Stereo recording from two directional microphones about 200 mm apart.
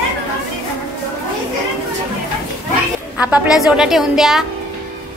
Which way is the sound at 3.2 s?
5° right (ahead or behind).